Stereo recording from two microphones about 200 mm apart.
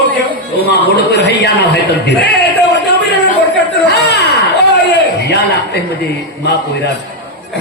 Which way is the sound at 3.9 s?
55° left (ahead or behind).